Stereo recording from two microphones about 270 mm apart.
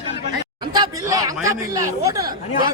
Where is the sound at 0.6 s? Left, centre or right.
Centre.